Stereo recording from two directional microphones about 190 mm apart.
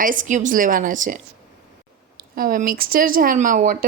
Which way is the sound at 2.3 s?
45° right (ahead or behind).